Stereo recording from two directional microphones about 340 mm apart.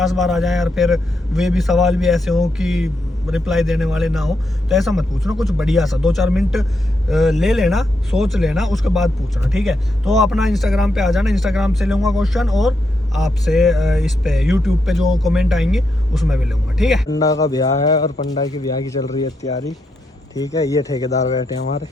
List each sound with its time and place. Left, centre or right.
0.0 s speech: centre
17.1 s a man's voice: centre